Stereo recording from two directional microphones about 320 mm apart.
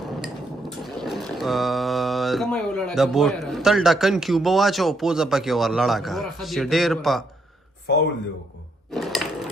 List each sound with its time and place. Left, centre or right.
0.0 s a sound: centre
7.9 s speech: left
8.9 s sewing machine: centre